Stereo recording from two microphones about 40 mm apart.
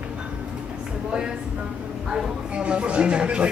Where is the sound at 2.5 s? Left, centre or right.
Right.